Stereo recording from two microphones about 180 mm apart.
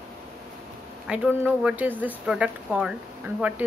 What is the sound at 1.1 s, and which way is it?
Speech, 5° right (ahead or behind).